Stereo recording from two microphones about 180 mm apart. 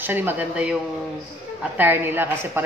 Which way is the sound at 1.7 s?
10° right (ahead or behind).